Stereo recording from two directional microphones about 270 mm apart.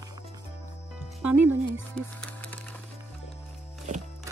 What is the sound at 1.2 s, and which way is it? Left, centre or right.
Speech, centre.